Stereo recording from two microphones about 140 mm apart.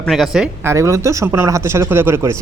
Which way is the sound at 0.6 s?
20° right (ahead or behind).